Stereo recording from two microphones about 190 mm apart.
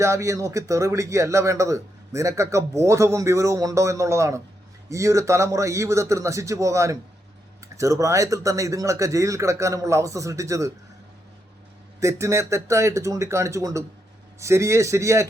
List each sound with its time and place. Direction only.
0.0 s speech: 15° right (ahead or behind)
11.9 s speech: 15° right (ahead or behind)